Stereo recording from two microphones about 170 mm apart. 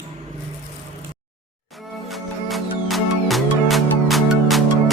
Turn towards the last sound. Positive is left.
turn(degrees=0)  # may be behind; listen again after turning